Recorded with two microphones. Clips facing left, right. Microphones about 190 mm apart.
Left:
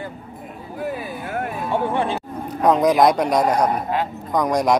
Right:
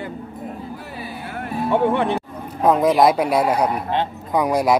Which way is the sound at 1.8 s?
60° right (ahead or behind).